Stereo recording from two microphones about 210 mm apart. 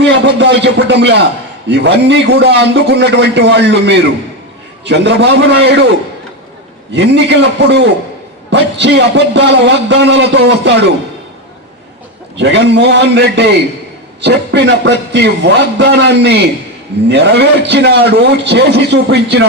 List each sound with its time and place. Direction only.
0.3 s a man's voice: 60° right (ahead or behind)
6.9 s a man's voice: 55° right (ahead or behind)
12.4 s a man's voice: 55° right (ahead or behind)